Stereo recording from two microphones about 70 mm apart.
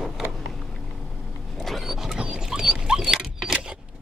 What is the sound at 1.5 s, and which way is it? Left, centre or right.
Dog, centre.